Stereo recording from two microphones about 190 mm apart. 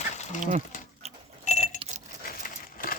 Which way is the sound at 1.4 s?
40° left (ahead or behind).